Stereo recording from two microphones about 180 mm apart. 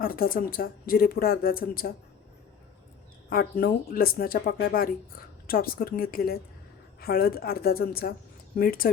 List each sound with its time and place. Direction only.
0.0 s speech: 55° left (ahead or behind)
3.2 s speech: 55° left (ahead or behind)